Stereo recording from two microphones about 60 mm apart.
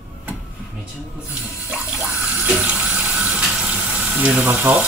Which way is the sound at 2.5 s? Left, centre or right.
Centre.